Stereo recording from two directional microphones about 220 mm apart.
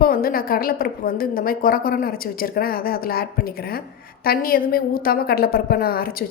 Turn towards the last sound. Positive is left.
turn(degrees=40)  # may be behind; listen again after turning